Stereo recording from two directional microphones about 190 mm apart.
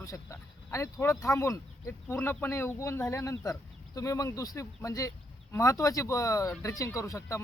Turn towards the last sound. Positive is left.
turn(degrees=15)  # may be behind; listen again after turning